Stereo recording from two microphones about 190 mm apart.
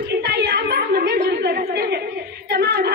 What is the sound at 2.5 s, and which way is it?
Singing, 60° right (ahead or behind).